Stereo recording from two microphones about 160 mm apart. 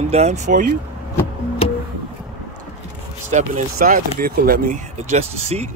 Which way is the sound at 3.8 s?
60° right (ahead or behind).